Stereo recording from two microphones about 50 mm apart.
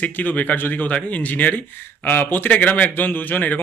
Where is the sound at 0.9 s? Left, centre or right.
Left.